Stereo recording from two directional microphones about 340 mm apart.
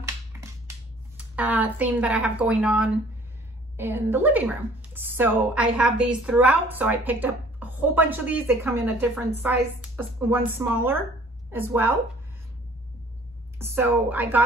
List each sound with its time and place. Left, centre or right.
0.3 s finger snapping: centre
1.1 s a woman's voice: centre
13.6 s speech: centre